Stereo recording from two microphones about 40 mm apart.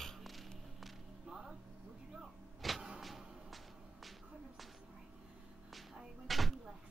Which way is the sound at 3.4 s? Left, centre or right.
Centre.